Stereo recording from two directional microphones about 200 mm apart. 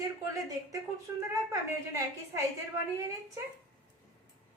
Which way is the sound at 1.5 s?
15° right (ahead or behind).